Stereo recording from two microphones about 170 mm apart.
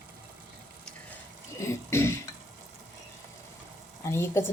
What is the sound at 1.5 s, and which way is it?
Speech, 15° left (ahead or behind).